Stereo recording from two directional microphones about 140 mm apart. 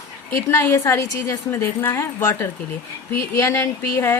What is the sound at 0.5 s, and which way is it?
A woman's voice, 20° left (ahead or behind).